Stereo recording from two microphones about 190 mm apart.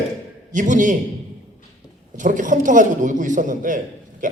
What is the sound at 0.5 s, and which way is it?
Speech, 45° right (ahead or behind).